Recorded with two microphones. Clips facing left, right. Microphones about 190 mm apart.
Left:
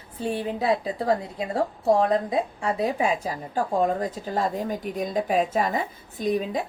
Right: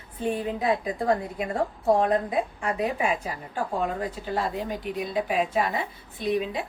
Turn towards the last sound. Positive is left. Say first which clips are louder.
# left 2 dB
turn(degrees=40)  # may be behind; listen again after turning